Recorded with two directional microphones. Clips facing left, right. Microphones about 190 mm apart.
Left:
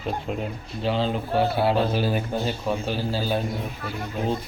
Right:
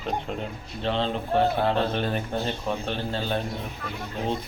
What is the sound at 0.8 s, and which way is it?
A man's voice, 5° left (ahead or behind).